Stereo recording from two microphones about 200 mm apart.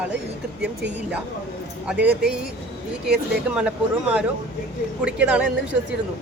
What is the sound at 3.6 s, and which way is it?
Speech, 5° right (ahead or behind).